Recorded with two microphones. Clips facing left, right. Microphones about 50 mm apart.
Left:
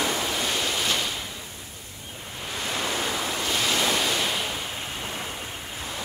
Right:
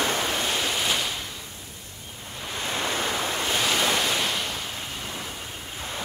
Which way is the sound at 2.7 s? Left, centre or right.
Right.